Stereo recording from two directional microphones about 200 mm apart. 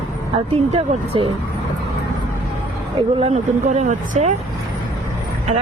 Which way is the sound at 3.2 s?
35° right (ahead or behind).